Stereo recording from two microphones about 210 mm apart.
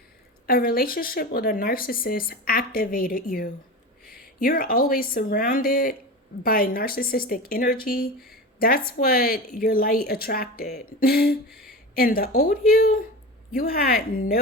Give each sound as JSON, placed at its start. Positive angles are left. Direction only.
{"t": 0.4, "sound": "speech", "side_deg": 45}